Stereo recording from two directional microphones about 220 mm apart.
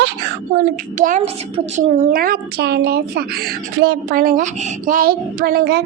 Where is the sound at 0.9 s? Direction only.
35° right (ahead or behind).